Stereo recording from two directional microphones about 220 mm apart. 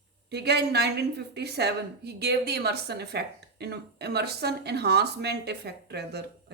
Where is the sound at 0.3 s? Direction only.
50° right (ahead or behind).